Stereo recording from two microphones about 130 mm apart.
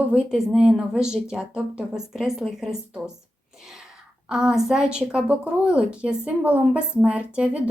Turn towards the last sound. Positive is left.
turn(degrees=-10)  # may be behind; listen again after turning